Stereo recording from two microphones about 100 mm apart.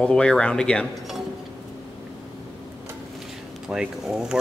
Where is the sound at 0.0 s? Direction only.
10° left (ahead or behind).